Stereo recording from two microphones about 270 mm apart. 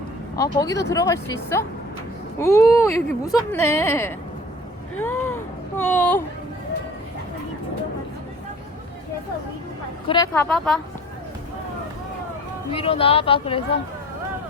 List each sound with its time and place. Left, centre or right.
0.3 s speech: centre
4.9 s a sound: centre
10.1 s speech: centre
12.7 s speech: left